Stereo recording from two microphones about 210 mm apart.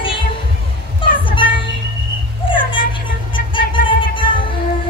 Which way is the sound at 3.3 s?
25° left (ahead or behind).